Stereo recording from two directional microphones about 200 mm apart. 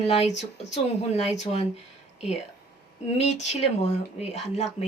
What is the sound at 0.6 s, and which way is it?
Speech, 35° left (ahead or behind).